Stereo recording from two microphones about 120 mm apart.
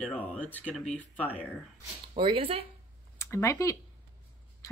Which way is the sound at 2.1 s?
50° right (ahead or behind).